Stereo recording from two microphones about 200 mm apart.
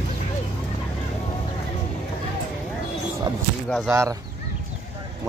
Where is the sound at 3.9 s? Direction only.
15° right (ahead or behind).